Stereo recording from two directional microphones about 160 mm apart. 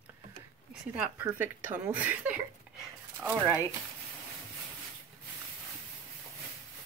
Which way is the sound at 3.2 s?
10° right (ahead or behind).